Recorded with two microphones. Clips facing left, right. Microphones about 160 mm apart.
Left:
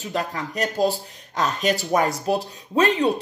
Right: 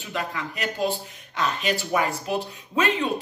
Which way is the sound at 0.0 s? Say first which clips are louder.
Left 3 dB; 40° left (ahead or behind).